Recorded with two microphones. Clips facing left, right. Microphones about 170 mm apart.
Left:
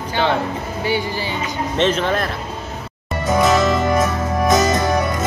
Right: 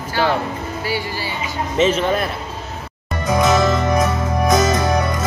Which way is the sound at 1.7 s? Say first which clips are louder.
Right 2 dB; 5° right (ahead or behind).